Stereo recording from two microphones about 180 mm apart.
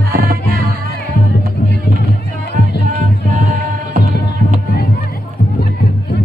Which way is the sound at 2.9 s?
50° right (ahead or behind).